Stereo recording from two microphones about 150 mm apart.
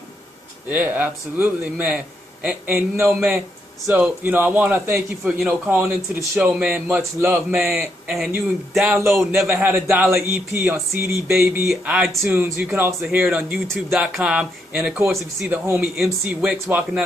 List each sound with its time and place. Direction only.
0.7 s speech: 10° right (ahead or behind)
11.6 s speech: 5° right (ahead or behind)